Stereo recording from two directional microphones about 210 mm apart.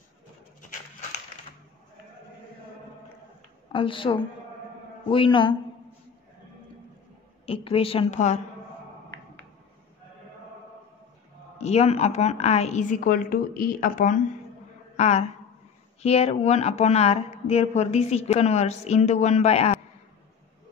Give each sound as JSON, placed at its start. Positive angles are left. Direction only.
{"t": 3.7, "sound": "a woman's voice", "side_deg": 25}
{"t": 7.4, "sound": "a woman's voice", "side_deg": 25}
{"t": 11.5, "sound": "a woman's voice", "side_deg": 30}